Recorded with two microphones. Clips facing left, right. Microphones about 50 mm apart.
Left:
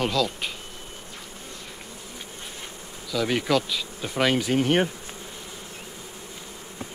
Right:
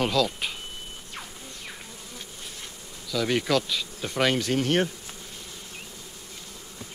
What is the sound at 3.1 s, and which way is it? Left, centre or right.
Bee, centre.